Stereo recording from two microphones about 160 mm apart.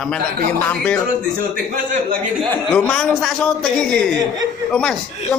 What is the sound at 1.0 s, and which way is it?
A man's voice, 60° right (ahead or behind).